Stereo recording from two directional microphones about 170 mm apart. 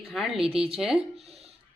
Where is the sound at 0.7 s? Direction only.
Centre (ahead or behind).